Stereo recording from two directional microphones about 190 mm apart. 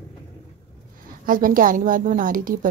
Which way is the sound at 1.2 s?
45° right (ahead or behind).